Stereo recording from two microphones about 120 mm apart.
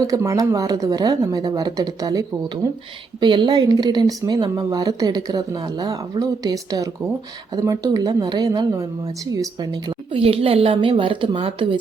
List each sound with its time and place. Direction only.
0.0 s speech: 25° right (ahead or behind)
3.2 s speech: 40° right (ahead or behind)
10.2 s a woman's voice: 50° right (ahead or behind)